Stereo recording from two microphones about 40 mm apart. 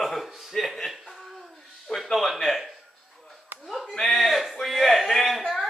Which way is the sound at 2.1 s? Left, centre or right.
Centre.